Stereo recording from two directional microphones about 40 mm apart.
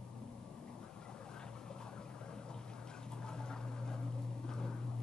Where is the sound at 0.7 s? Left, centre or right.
Centre.